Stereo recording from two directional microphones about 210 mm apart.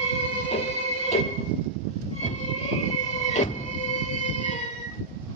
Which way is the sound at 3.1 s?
35° left (ahead or behind).